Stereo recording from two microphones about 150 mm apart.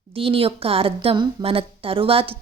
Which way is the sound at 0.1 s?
40° right (ahead or behind).